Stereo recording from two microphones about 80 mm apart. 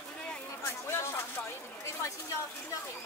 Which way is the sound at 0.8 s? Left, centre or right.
Left.